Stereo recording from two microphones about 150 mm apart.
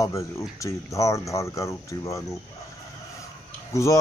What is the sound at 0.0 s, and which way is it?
Speech, 20° left (ahead or behind).